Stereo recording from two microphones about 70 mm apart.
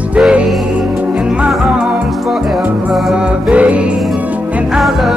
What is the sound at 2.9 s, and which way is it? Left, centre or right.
Music, centre.